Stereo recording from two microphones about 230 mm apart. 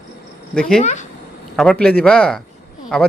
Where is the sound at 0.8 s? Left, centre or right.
Left.